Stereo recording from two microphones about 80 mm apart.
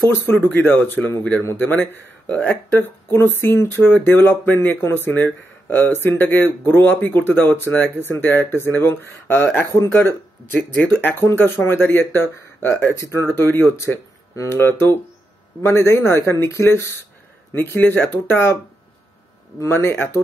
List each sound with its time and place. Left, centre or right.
0.5 s speech: left
19.6 s speech: left